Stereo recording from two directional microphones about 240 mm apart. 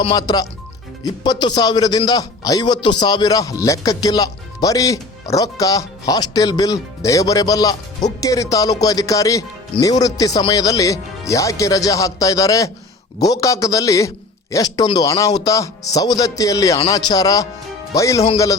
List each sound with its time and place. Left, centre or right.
0.0 s speech: centre